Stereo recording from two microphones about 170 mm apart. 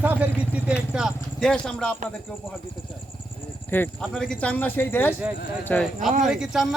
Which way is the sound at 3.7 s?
10° left (ahead or behind).